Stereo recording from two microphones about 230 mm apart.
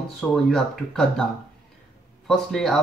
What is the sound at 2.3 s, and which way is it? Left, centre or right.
Speech, centre.